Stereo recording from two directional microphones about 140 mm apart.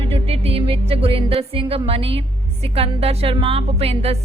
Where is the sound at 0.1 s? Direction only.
45° right (ahead or behind).